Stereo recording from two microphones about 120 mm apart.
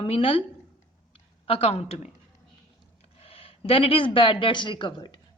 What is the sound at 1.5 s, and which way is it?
Speech, 55° left (ahead or behind).